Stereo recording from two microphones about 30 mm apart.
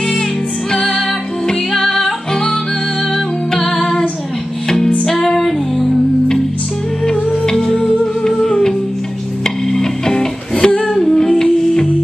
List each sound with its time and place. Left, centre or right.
0.7 s music: centre
3.5 s female singing: centre
4.6 s music: centre
7.5 s music: centre
8.4 s music: centre